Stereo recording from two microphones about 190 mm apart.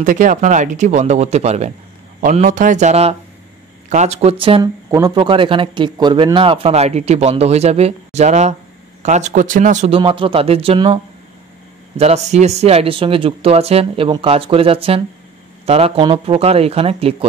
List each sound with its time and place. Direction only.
0.0 s a man's voice: 40° right (ahead or behind)
12.0 s a man's voice: 35° right (ahead or behind)